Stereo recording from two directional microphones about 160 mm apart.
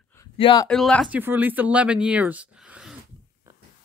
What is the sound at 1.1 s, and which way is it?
Speech, 10° right (ahead or behind).